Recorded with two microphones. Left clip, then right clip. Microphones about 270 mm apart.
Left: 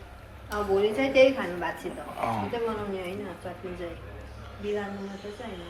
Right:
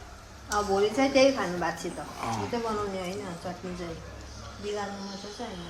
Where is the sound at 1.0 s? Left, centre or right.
Right.